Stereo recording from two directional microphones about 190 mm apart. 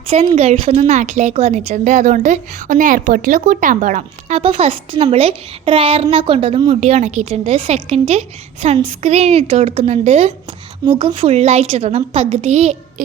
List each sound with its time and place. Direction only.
0.3 s a woman's voice: 30° right (ahead or behind)